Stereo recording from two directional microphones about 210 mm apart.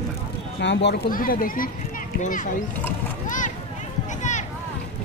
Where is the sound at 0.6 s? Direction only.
55° left (ahead or behind); by 2.4 s 40° left (ahead or behind).